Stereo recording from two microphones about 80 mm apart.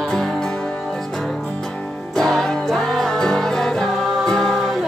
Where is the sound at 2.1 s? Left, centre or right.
Centre.